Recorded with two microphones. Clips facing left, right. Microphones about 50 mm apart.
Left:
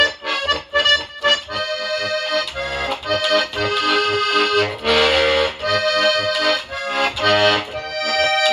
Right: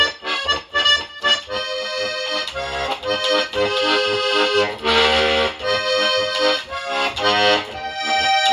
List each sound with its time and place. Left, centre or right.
0.0 s music: centre
3.3 s accordion: centre